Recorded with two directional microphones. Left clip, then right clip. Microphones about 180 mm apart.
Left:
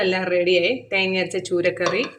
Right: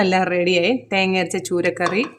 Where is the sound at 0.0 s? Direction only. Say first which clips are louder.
Right 2 dB; 60° right (ahead or behind).